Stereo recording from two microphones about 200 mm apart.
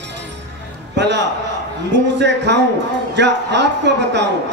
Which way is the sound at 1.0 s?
60° right (ahead or behind).